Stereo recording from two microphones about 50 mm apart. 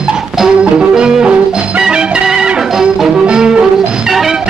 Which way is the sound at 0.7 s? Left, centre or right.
Centre.